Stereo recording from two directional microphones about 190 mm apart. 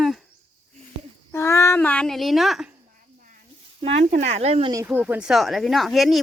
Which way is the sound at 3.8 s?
35° right (ahead or behind).